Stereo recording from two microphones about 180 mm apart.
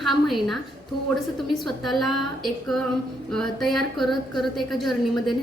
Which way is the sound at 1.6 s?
Centre (ahead or behind).